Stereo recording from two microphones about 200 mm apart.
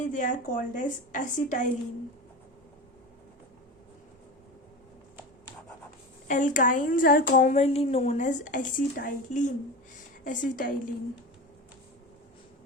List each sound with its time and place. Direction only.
0.0 s speech: 40° left (ahead or behind)
6.2 s speech: 40° left (ahead or behind)